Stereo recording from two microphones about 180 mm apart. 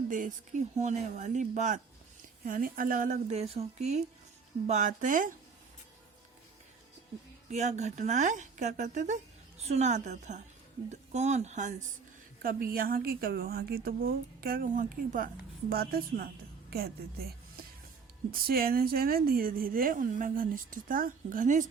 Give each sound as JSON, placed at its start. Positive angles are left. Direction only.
{"t": 0.1, "sound": "a woman's voice", "side_deg": -45}
{"t": 7.5, "sound": "a woman's voice", "side_deg": -40}
{"t": 12.4, "sound": "a woman's voice", "side_deg": -55}